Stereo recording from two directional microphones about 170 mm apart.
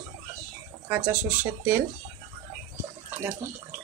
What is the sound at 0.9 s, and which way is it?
Speech, 10° right (ahead or behind).